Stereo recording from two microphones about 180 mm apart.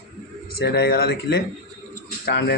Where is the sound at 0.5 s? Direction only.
60° left (ahead or behind).